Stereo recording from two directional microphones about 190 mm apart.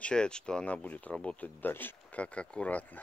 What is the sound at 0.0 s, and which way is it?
Speech, 5° left (ahead or behind).